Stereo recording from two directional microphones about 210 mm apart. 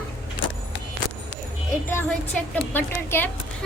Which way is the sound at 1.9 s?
10° left (ahead or behind).